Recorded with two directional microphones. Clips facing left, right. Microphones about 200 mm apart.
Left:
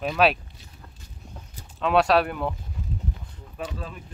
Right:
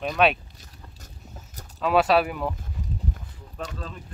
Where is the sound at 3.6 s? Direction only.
10° left (ahead or behind).